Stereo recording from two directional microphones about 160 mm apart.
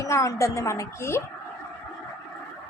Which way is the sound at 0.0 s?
20° left (ahead or behind).